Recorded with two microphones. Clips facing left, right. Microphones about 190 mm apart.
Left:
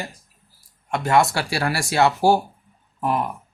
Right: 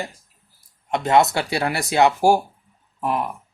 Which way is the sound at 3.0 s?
Centre (ahead or behind).